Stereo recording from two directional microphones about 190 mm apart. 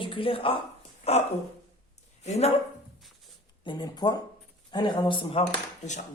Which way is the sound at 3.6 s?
25° left (ahead or behind).